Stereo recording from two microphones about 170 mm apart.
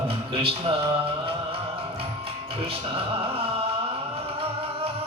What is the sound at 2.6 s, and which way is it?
Speech, 30° right (ahead or behind).